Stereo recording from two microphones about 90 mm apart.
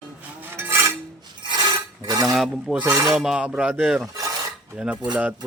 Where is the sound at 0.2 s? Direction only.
25° right (ahead or behind).